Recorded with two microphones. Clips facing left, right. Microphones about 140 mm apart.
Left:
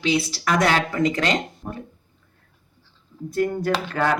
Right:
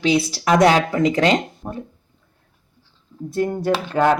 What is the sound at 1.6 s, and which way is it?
Speech, 20° right (ahead or behind).